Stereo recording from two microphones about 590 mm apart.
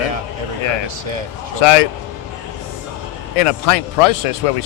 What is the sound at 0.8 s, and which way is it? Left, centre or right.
Speech, right.